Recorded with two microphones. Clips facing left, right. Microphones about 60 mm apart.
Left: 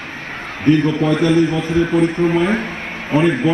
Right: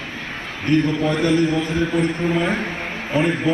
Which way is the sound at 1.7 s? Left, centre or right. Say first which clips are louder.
Left 5 dB; left.